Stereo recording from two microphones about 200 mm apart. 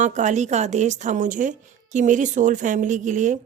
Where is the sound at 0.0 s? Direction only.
35° right (ahead or behind).